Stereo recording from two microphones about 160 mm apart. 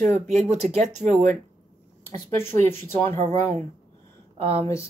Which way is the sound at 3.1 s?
45° right (ahead or behind).